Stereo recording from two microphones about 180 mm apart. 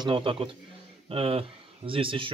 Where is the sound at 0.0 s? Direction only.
30° right (ahead or behind).